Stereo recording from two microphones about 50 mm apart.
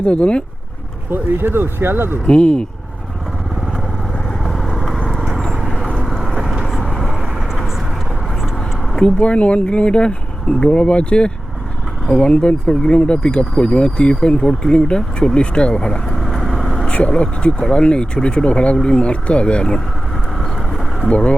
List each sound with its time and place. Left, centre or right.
0.0 s speech: left
1.1 s speech: right
2.2 s speech: centre
4.4 s vehicle: centre
6.0 s vehicle: centre
9.0 s speech: left; by 16.6 s centre
16.8 s speech: left